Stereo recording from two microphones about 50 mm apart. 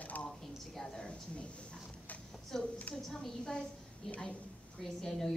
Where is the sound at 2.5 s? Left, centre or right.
Centre.